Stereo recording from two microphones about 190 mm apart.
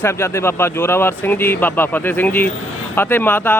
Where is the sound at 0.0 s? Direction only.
15° left (ahead or behind).